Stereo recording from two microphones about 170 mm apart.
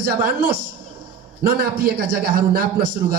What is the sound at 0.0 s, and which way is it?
A man's voice, 60° right (ahead or behind).